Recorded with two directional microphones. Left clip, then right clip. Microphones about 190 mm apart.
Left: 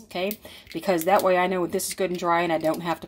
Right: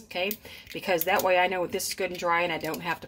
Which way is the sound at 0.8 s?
30° left (ahead or behind).